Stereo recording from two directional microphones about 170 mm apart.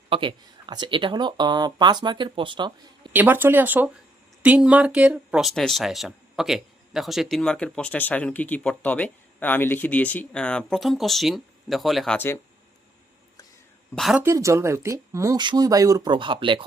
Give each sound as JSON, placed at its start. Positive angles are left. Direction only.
{"t": 0.1, "sound": "speech", "side_deg": -30}
{"t": 3.1, "sound": "speech", "side_deg": -10}
{"t": 12.1, "sound": "speech", "side_deg": 15}
{"t": 13.9, "sound": "speech", "side_deg": 0}
{"t": 14.2, "sound": "speech", "side_deg": -15}